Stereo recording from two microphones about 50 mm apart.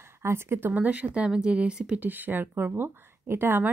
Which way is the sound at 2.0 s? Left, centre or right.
Right.